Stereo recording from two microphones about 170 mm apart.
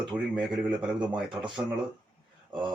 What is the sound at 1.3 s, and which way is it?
Speech, 30° right (ahead or behind).